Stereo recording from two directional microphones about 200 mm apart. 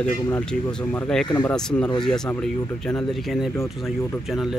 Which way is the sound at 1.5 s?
5° left (ahead or behind).